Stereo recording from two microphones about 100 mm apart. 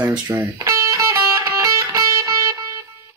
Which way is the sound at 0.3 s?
35° right (ahead or behind).